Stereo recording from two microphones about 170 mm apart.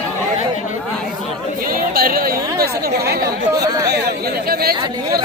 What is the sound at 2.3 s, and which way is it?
Speech, 20° right (ahead or behind).